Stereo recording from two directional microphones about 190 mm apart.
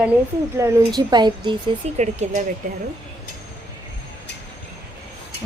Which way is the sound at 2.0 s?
40° right (ahead or behind).